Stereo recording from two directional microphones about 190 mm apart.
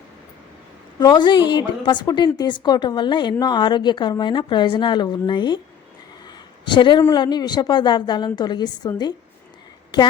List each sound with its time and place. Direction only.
0.9 s a woman's voice: 25° left (ahead or behind)
6.7 s a woman's voice: 25° left (ahead or behind)